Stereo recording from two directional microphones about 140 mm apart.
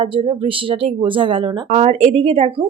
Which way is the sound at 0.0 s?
40° right (ahead or behind).